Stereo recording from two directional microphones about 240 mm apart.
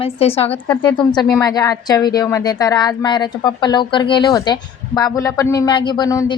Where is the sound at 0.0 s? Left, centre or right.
Left.